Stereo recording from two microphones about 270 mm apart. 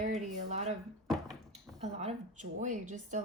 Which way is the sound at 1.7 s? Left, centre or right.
Right.